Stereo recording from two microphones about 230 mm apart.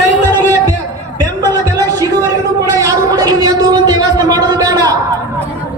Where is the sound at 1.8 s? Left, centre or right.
Centre.